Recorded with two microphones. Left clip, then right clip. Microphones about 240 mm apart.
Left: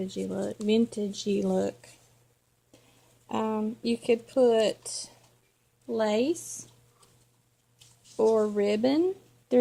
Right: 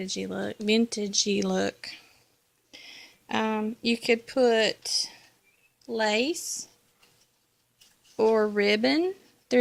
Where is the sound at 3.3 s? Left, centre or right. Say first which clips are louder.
Right 2 dB; right.